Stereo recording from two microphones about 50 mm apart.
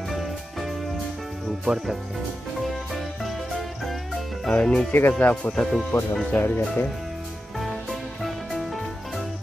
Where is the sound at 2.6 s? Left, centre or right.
Centre.